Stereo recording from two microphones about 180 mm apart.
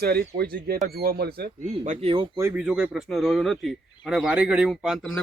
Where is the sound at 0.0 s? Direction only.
60° right (ahead or behind).